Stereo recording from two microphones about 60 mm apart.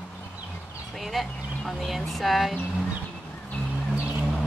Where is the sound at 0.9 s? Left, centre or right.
Centre.